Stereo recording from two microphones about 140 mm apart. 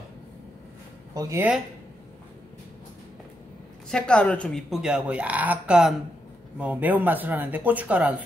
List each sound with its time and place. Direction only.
1.1 s speech: 25° right (ahead or behind)
3.9 s speech: 5° left (ahead or behind); by 8.2 s 10° right (ahead or behind)